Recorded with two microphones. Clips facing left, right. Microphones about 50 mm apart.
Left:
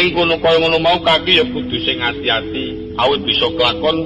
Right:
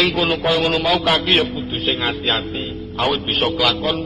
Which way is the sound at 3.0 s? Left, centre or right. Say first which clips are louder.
Left 4 dB; left.